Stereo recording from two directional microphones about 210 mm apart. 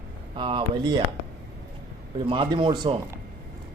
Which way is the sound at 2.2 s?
25° right (ahead or behind).